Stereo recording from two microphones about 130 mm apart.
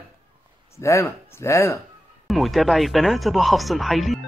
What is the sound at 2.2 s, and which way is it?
Speech, centre (ahead or behind).